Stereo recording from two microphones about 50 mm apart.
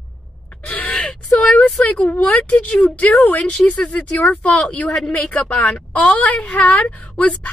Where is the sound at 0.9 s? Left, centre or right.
Centre.